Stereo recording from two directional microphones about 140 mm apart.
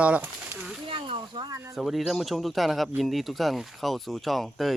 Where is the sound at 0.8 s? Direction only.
40° right (ahead or behind).